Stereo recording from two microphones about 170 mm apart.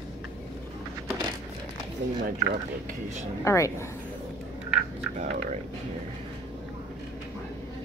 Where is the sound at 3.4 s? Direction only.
15° left (ahead or behind).